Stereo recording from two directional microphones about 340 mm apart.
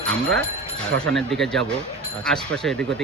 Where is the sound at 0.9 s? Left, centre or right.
Right.